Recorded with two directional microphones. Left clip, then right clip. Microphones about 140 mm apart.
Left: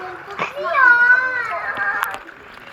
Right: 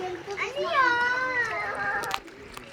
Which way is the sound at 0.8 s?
45° right (ahead or behind).